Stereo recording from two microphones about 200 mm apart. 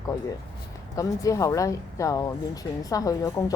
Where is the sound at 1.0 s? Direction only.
15° left (ahead or behind).